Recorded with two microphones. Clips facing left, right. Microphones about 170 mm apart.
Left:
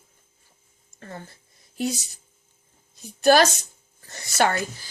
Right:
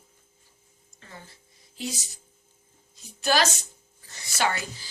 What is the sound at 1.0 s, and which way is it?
Speech, 50° left (ahead or behind).